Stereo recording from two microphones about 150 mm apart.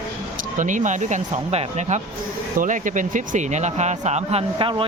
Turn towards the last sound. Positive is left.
turn(degrees=-45)  # may be behind; listen again after turning